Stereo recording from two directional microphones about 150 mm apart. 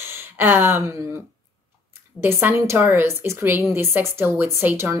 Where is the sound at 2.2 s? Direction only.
15° right (ahead or behind).